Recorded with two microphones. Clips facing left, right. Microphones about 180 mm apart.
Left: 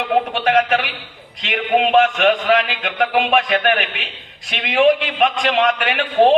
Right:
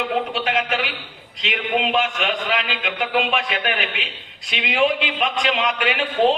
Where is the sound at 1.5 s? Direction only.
55° left (ahead or behind).